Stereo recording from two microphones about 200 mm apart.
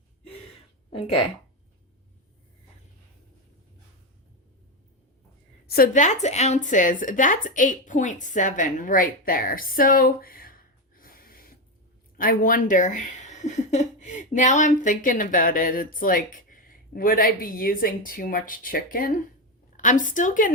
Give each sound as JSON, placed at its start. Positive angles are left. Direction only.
{"t": 0.9, "sound": "speech", "side_deg": 25}
{"t": 5.6, "sound": "a woman's voice", "side_deg": 50}